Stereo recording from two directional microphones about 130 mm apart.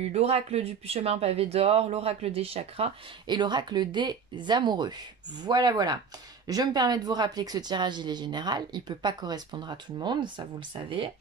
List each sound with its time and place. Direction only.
0.0 s speech: 55° right (ahead or behind)
3.3 s speech: 35° right (ahead or behind)